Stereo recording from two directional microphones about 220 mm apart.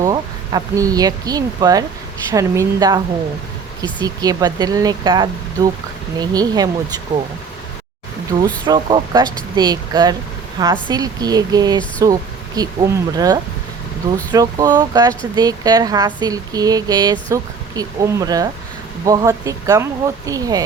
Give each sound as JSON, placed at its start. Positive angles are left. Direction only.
{"t": 0.0, "sound": "speech", "side_deg": -15}
{"t": 4.0, "sound": "speech", "side_deg": -15}
{"t": 8.6, "sound": "speech", "side_deg": -20}